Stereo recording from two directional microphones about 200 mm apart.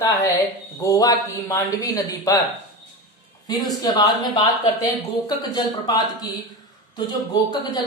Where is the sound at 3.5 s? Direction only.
20° left (ahead or behind).